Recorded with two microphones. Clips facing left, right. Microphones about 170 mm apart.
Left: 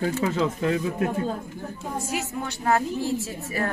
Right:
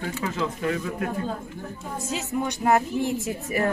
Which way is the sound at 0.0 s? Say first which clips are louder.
Left 4 dB; 30° left (ahead or behind).